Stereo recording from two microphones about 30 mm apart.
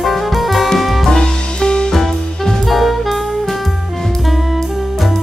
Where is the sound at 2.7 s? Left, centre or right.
Centre.